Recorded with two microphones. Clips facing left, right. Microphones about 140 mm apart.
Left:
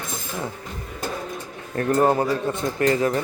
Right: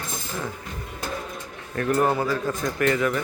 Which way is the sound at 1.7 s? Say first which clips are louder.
Left 3 dB; 30° left (ahead or behind).